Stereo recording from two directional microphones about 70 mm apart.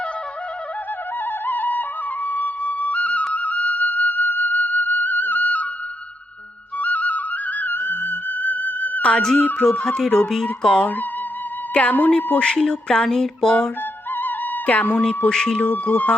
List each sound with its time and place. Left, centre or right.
1.2 s music: left
2.2 s flute: left
3.3 s music: left
6.7 s music: left
9.2 s music: centre
9.6 s a sound: centre
14.2 s music: left
15.3 s a sound: centre
15.7 s speech: left